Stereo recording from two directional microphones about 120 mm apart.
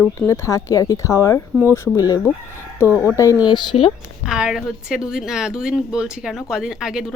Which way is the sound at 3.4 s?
40° left (ahead or behind).